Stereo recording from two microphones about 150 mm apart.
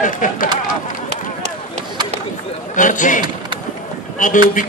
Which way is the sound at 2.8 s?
60° left (ahead or behind).